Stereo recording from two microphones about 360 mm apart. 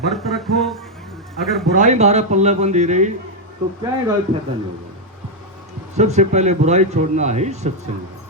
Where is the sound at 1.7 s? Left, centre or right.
Centre.